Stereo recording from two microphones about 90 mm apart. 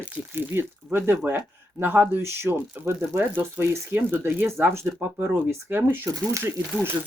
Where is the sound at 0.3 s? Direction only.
25° right (ahead or behind).